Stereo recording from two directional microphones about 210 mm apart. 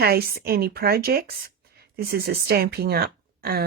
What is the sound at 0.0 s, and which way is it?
A woman's voice, 50° right (ahead or behind).